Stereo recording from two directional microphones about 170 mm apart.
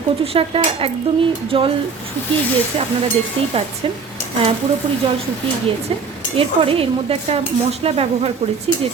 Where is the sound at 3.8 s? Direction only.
35° right (ahead or behind).